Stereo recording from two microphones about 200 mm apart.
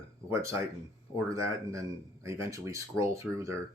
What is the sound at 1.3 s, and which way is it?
Speech, 15° right (ahead or behind).